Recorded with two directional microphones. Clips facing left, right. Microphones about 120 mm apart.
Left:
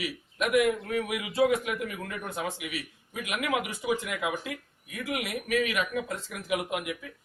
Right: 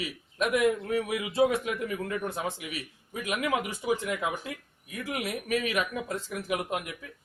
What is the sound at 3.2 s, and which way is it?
Speech, 35° right (ahead or behind).